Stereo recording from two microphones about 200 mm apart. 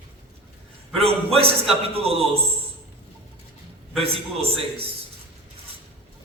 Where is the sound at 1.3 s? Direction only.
30° right (ahead or behind).